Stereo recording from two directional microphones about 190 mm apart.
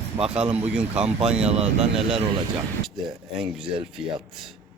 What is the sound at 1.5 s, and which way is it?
Speech, 35° right (ahead or behind).